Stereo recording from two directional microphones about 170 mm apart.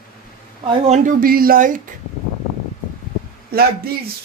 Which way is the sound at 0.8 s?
55° right (ahead or behind).